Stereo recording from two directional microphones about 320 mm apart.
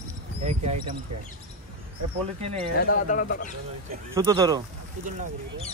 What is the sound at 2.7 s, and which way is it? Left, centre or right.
Speech, left.